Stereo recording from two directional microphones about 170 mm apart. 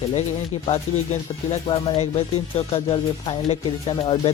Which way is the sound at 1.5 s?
30° left (ahead or behind).